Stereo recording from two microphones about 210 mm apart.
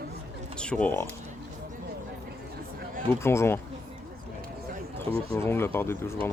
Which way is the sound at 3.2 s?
10° left (ahead or behind).